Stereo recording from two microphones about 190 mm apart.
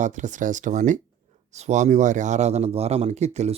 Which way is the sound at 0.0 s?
40° right (ahead or behind).